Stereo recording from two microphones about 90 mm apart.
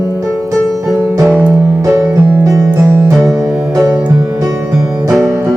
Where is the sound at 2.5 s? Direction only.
35° right (ahead or behind).